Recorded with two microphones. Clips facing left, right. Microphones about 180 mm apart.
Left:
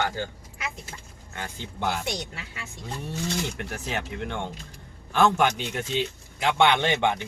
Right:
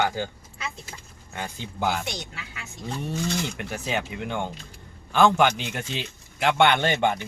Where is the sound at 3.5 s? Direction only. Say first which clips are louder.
Right 3 dB; centre (ahead or behind).